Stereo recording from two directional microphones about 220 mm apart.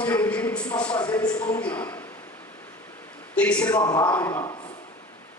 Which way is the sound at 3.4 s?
5° left (ahead or behind).